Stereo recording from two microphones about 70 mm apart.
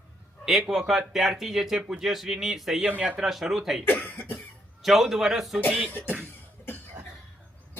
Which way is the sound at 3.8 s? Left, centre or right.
Left.